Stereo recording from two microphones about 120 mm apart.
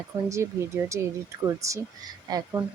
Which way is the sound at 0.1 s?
25° right (ahead or behind).